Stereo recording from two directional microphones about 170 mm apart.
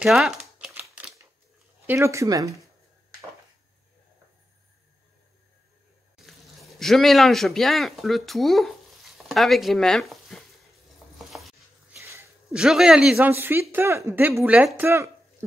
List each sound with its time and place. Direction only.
0.0 s typing: 5° right (ahead or behind)
1.9 s speech: 15° right (ahead or behind)
6.2 s speech: centre (ahead or behind)
11.0 s stir: 5° right (ahead or behind)
11.9 s a sound: 15° right (ahead or behind)
12.4 s speech: centre (ahead or behind)